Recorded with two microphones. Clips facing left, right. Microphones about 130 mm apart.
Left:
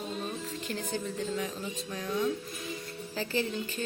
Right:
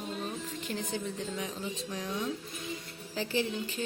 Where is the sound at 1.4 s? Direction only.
15° right (ahead or behind).